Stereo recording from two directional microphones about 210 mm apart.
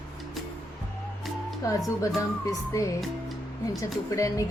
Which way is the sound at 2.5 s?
15° left (ahead or behind).